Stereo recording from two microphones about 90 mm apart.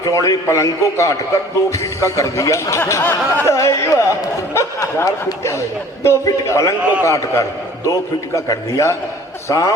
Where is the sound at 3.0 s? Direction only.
20° left (ahead or behind).